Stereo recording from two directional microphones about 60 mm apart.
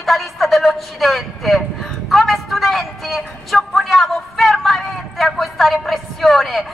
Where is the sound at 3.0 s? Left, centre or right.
Centre.